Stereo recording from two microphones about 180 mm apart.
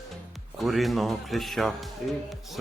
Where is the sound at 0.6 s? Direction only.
Centre (ahead or behind).